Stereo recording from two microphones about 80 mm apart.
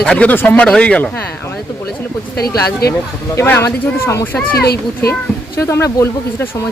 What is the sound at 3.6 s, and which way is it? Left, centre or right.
Speech, left.